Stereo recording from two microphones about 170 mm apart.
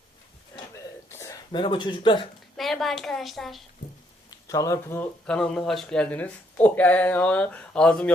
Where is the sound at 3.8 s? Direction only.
60° left (ahead or behind).